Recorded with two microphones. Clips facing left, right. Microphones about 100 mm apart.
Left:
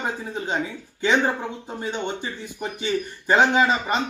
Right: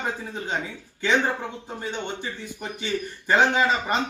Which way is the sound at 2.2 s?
15° left (ahead or behind).